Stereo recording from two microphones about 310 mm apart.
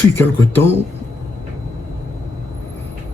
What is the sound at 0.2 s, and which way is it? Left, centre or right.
Speech, centre.